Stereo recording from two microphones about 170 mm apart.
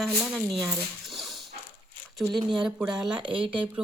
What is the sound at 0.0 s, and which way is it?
Speech, centre (ahead or behind).